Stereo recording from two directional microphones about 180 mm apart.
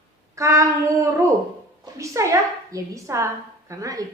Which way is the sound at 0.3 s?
15° right (ahead or behind).